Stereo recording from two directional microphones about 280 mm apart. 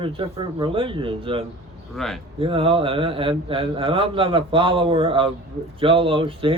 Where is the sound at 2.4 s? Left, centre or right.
Centre.